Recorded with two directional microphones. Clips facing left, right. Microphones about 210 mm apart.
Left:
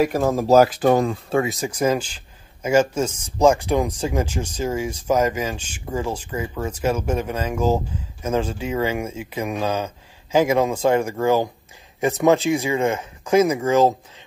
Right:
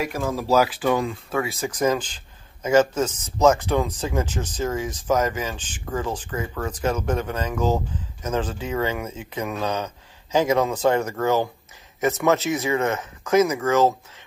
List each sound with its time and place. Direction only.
0.0 s speech: 45° left (ahead or behind)
1.3 s speech: 20° left (ahead or behind)
13.4 s speech: 30° left (ahead or behind)
13.7 s speech: 15° left (ahead or behind)